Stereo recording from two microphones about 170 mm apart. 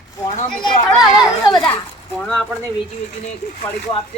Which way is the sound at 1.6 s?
5° left (ahead or behind).